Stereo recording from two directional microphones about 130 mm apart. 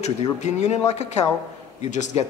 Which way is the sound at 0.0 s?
65° left (ahead or behind).